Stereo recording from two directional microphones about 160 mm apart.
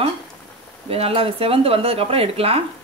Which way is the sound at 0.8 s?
35° right (ahead or behind).